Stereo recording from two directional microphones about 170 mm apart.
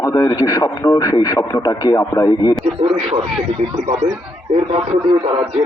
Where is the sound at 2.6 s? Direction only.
35° right (ahead or behind).